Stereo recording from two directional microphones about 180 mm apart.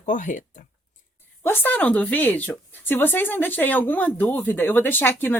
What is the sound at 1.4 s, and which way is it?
Speech, 10° left (ahead or behind).